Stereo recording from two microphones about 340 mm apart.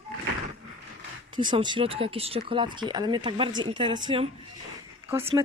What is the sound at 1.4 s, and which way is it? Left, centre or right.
Speech, centre.